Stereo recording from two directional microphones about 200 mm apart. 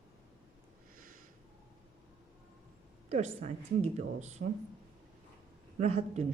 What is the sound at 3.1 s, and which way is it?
Speech, 35° right (ahead or behind).